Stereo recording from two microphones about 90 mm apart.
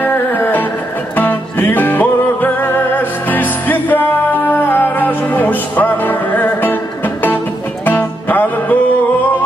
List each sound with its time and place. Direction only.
0.0 s music: 20° left (ahead or behind)
7.8 s music: 20° left (ahead or behind)